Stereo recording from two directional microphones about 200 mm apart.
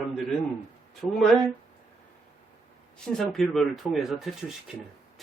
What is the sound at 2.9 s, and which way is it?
Speech, 5° left (ahead or behind).